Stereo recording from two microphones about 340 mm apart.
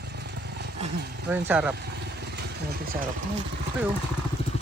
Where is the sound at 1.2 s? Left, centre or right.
Centre.